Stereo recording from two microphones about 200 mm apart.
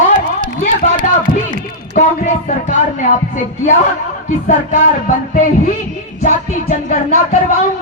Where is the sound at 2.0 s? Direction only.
40° left (ahead or behind).